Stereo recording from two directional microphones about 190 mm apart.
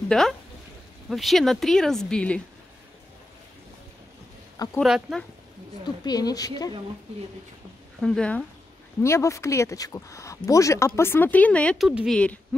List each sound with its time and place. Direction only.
0.1 s speech: 5° left (ahead or behind)
4.7 s speech: centre (ahead or behind)
6.0 s a woman's voice: 20° left (ahead or behind)
8.0 s speech: 5° left (ahead or behind)
11.9 s speech: 5° right (ahead or behind)